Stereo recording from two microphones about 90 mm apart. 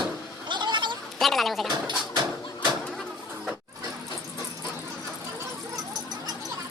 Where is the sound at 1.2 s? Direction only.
Centre (ahead or behind).